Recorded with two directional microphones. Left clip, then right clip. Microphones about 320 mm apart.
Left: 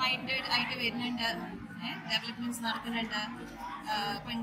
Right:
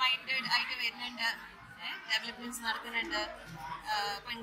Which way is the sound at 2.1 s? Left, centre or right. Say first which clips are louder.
Even; right.